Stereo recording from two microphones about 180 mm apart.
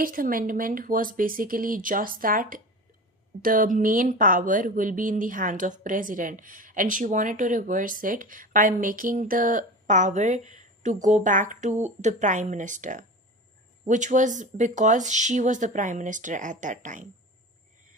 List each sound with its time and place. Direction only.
0.0 s speech: 50° right (ahead or behind)